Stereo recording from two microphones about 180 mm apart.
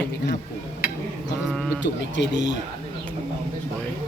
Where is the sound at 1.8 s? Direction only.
80° left.